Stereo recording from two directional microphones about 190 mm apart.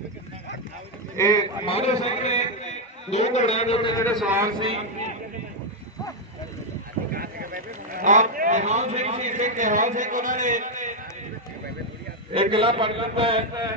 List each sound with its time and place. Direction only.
1.1 s speech: 20° left (ahead or behind)
1.7 s a man's voice: 35° left (ahead or behind)
4.2 s a man's voice: 10° right (ahead or behind)
7.1 s a man's voice: 50° right (ahead or behind)
12.3 s a man's voice: 30° right (ahead or behind)